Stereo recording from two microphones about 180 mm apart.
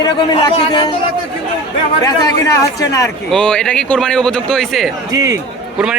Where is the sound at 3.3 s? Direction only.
5° left (ahead or behind).